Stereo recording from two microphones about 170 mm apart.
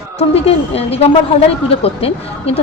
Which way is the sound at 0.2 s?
35° left (ahead or behind).